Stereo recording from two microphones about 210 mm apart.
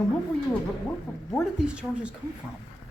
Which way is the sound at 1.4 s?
5° right (ahead or behind).